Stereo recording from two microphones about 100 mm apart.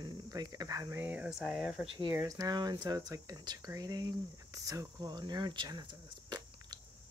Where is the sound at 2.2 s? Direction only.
40° right (ahead or behind).